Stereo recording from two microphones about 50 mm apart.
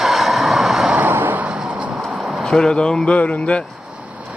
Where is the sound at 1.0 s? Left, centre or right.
Right.